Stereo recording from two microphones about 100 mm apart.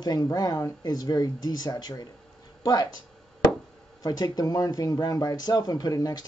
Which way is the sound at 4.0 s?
40° left (ahead or behind).